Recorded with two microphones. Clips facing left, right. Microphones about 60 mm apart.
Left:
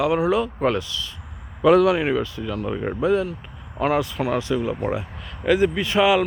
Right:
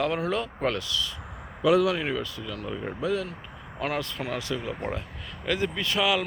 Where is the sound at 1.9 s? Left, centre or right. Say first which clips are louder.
Left 7 dB; left.